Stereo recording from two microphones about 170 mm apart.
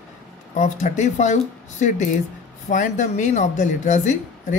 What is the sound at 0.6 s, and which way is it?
Speech, 45° left (ahead or behind).